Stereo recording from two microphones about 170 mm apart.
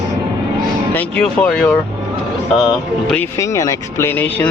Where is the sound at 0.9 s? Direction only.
5° left (ahead or behind).